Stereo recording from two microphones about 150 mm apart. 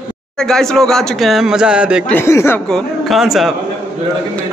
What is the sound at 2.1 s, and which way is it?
Speech, 15° left (ahead or behind).